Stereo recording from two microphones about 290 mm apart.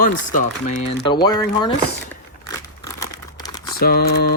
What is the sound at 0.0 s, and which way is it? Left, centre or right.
Speech, left.